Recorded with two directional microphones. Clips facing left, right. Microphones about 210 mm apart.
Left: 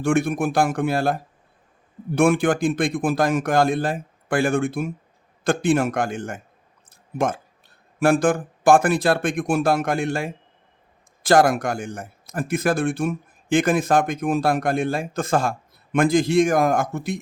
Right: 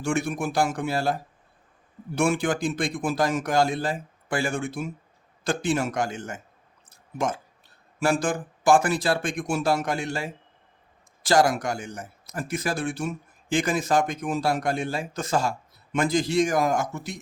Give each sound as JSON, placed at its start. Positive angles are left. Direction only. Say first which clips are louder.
{"t": 0.0, "sound": "speech", "louder": "left 6 dB", "side_deg": 55}
{"t": 6.9, "sound": "a sound", "louder": "left 4 dB", "side_deg": 55}
{"t": 7.9, "sound": "speech", "louder": "left 6 dB", "side_deg": 55}